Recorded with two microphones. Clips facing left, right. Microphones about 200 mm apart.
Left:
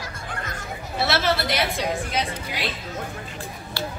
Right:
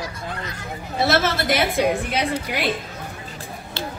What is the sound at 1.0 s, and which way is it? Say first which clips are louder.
A woman's voice: right 3 dB; 45° right (ahead or behind).